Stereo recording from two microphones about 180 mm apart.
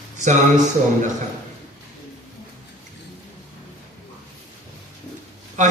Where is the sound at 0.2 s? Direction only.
40° right (ahead or behind).